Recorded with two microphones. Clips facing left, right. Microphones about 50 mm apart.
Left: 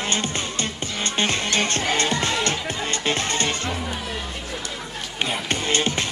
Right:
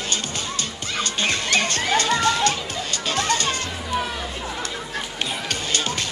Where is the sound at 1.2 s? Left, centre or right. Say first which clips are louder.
Even; left.